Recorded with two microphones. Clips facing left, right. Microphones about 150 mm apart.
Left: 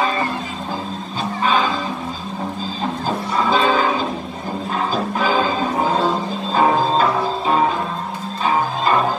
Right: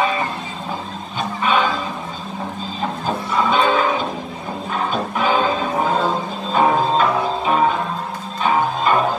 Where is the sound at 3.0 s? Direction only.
35° left (ahead or behind).